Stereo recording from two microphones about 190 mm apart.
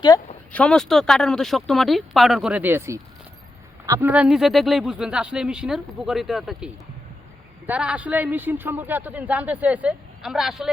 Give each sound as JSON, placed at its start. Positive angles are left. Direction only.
{"t": 0.5, "sound": "speech", "side_deg": 5}
{"t": 4.1, "sound": "speech", "side_deg": -5}
{"t": 7.7, "sound": "speech", "side_deg": -5}